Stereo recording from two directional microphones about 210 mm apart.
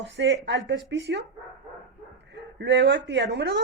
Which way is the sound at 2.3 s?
55° right (ahead or behind).